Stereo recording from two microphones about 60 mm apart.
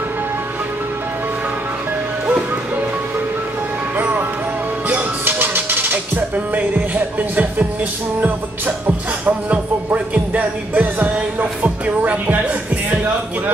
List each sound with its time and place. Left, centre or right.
3.9 s music: right